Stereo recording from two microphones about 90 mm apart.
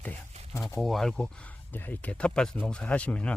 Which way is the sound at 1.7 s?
20° left (ahead or behind).